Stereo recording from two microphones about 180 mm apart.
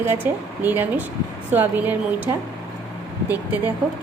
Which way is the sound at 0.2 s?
10° right (ahead or behind).